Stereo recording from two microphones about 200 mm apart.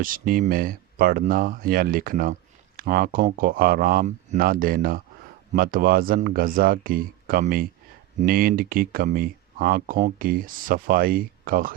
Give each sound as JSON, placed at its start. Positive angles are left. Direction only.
{"t": 0.0, "sound": "speech", "side_deg": -45}